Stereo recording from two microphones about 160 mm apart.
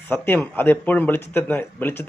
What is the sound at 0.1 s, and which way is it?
Speech, 15° left (ahead or behind).